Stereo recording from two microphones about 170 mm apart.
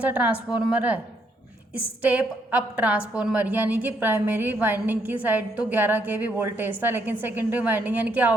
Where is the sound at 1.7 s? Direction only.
10° right (ahead or behind).